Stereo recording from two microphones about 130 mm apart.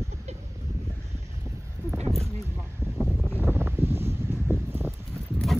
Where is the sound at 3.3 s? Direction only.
15° right (ahead or behind).